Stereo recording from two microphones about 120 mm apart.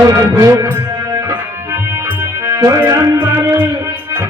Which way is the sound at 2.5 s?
25° right (ahead or behind).